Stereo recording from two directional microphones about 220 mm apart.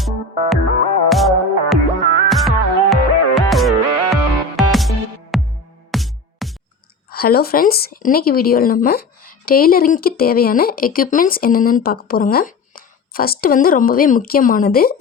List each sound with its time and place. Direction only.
0.0 s music: centre (ahead or behind)
7.1 s speech: 45° left (ahead or behind)